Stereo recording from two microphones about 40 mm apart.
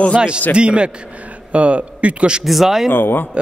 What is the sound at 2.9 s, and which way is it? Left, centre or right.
Speech, left.